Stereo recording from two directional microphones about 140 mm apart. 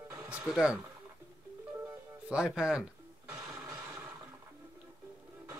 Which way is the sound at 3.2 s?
20° right (ahead or behind).